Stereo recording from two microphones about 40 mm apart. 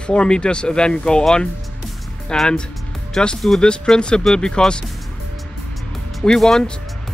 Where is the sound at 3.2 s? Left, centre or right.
Centre.